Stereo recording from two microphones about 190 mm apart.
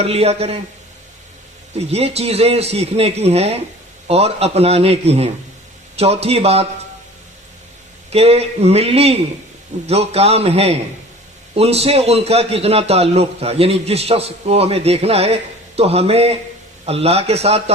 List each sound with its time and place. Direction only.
0.0 s a man's voice: 35° right (ahead or behind)
1.8 s a man's voice: 35° right (ahead or behind)
8.1 s a man's voice: 30° right (ahead or behind)